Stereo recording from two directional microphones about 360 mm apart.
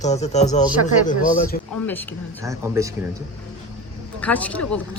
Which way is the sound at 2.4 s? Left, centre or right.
Centre.